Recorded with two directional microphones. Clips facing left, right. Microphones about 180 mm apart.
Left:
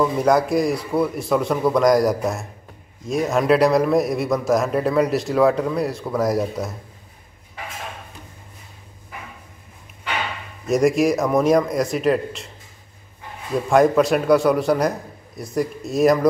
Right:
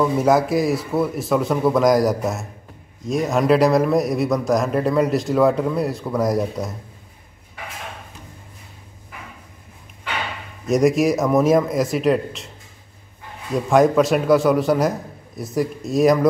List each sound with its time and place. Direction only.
0.0 s a man's voice: 5° right (ahead or behind)
10.7 s a man's voice: centre (ahead or behind)
13.7 s a man's voice: centre (ahead or behind)